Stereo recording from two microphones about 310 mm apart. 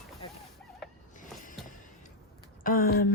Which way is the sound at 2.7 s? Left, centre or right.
Left.